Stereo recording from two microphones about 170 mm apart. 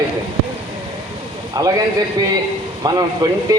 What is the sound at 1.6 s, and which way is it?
Speech, 20° right (ahead or behind).